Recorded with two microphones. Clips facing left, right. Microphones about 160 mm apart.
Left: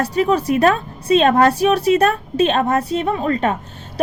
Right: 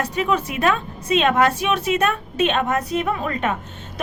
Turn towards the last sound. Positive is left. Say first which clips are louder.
# left 4 dB
turn(degrees=35)  # may be behind; listen again after turning